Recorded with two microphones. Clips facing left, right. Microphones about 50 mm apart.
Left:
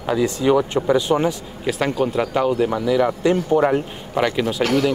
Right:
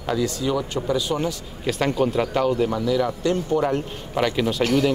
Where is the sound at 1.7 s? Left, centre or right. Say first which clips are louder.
Left 1 dB; centre; by 4.2 s left.